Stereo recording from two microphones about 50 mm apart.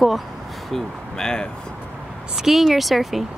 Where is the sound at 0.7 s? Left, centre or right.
Centre.